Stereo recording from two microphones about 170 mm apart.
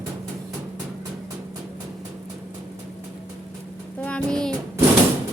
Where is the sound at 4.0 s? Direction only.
5° left (ahead or behind).